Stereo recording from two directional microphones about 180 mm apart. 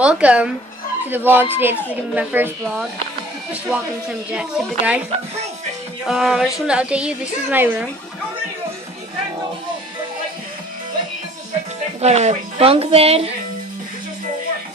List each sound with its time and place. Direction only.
0.0 s speech: 5° right (ahead or behind)
4.3 s speech: 5° right (ahead or behind)
6.0 s speech: centre (ahead or behind)
12.0 s a woman's voice: 40° right (ahead or behind)